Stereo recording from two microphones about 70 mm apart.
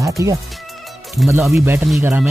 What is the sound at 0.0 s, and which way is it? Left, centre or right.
Speech, right.